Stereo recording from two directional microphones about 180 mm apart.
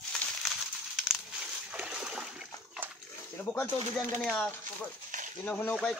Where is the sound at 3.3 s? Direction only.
10° left (ahead or behind).